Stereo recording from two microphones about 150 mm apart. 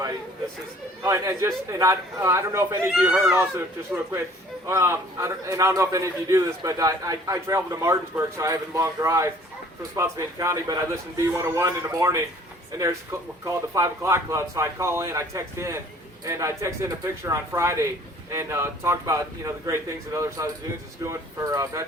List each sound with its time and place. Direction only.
1.0 s a man's voice: 20° right (ahead or behind)
2.9 s a child's voice: 5° right (ahead or behind)
4.6 s a man's voice: 20° right (ahead or behind)
13.4 s a man's voice: 20° right (ahead or behind)